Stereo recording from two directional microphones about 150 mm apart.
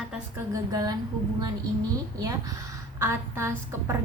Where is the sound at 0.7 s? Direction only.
25° right (ahead or behind).